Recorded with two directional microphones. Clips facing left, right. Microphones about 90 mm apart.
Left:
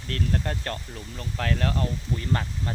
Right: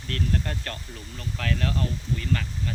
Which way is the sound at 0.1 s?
20° left (ahead or behind).